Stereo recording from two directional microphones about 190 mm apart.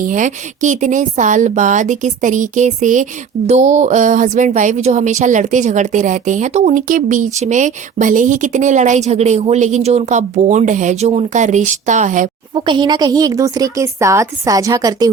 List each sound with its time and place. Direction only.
0.0 s a woman's voice: 40° right (ahead or behind)
12.5 s a woman's voice: 25° right (ahead or behind)